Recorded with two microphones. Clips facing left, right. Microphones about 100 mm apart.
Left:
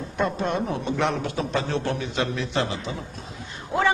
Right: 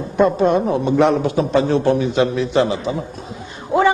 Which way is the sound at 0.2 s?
10° right (ahead or behind).